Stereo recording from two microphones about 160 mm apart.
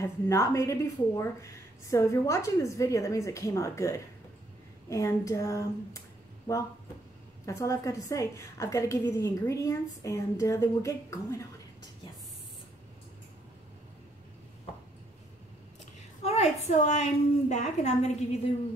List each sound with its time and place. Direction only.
0.0 s a woman's voice: 20° left (ahead or behind)
16.3 s a woman's voice: 45° left (ahead or behind)